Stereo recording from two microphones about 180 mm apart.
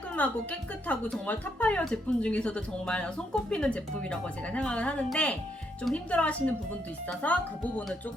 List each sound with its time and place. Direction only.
0.2 s speech: 10° left (ahead or behind)